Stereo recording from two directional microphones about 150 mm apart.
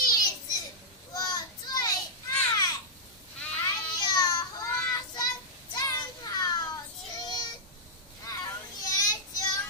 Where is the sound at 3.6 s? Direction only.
25° left (ahead or behind).